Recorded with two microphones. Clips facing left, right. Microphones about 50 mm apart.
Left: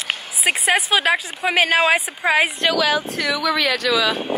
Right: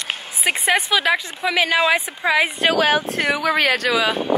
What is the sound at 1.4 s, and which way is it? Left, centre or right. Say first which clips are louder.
Speech: left 3 dB; left.